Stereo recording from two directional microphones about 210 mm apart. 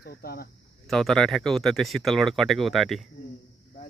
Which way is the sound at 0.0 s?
45° left (ahead or behind).